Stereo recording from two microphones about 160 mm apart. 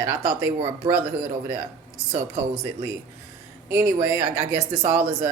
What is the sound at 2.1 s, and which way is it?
Speech, 40° right (ahead or behind).